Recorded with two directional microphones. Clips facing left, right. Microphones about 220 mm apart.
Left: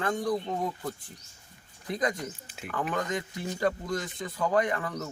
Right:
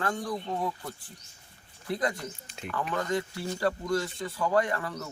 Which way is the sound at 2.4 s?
5° left (ahead or behind).